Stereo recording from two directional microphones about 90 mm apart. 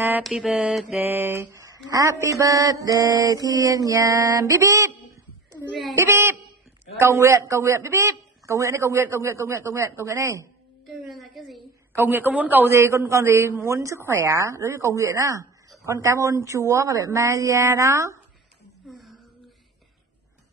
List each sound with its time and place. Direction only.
0.2 s mantra: centre (ahead or behind)
0.9 s mantra: 25° right (ahead or behind)
5.9 s a man's voice: 30° right (ahead or behind)
7.0 s mantra: 35° right (ahead or behind)
10.9 s a sound: centre (ahead or behind)
11.9 s a man's voice: 20° right (ahead or behind)
12.7 s mantra: 35° right (ahead or behind)
18.9 s a sound: centre (ahead or behind)